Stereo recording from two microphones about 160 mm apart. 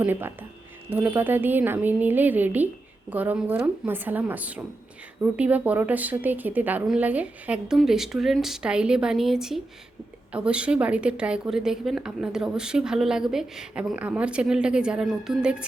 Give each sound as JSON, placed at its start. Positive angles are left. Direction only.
{"t": 0.0, "sound": "a woman's voice", "side_deg": -15}